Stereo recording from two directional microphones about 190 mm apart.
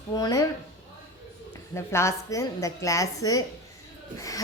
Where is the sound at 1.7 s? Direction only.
15° left (ahead or behind).